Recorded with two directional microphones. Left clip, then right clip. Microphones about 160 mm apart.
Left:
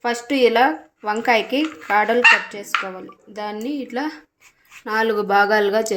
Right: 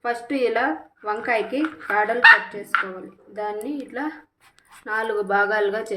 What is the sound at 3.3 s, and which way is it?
A woman's voice, 50° left (ahead or behind).